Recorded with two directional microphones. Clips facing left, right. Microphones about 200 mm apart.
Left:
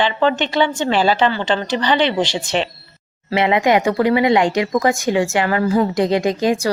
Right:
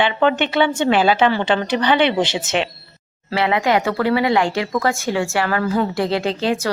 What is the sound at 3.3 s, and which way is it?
A woman's voice, 20° left (ahead or behind).